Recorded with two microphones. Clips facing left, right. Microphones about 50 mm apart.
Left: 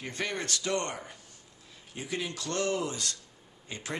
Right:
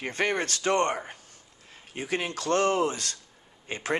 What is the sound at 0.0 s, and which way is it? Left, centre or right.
Speech, right.